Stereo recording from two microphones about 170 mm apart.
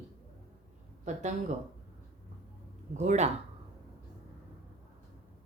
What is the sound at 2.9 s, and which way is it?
Speech, 45° right (ahead or behind).